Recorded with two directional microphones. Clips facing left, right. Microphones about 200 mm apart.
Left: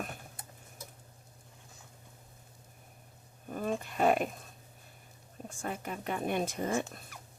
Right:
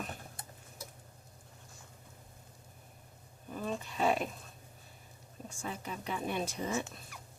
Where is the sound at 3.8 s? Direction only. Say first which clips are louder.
Left 3 dB; 55° left (ahead or behind).